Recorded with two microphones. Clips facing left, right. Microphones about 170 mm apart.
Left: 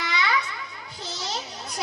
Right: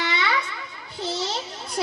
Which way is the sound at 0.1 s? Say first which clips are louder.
Left 4 dB; 30° right (ahead or behind).